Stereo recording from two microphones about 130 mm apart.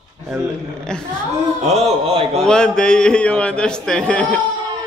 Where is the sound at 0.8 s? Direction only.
5° left (ahead or behind).